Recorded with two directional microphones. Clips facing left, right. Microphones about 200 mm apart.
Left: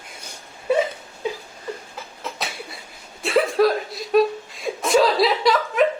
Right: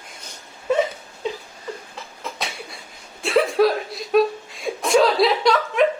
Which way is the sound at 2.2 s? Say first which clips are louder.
Even; centre (ahead or behind).